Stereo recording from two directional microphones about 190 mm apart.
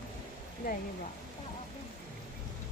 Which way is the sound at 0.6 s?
50° left (ahead or behind).